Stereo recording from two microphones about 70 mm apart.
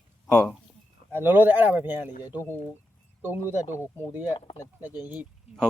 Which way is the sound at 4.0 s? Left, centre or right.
Right.